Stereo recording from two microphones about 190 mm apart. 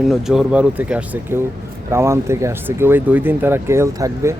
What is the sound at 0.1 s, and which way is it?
Speech, centre (ahead or behind).